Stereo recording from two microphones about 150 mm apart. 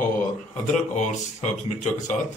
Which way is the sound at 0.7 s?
50° left (ahead or behind).